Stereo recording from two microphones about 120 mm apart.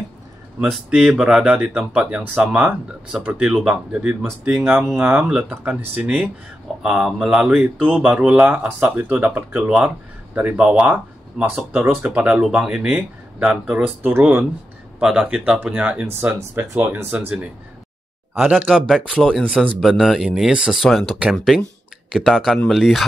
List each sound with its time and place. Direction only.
0.7 s speech: 5° right (ahead or behind)
15.0 s speech: 5° right (ahead or behind)
18.4 s speech: 10° right (ahead or behind)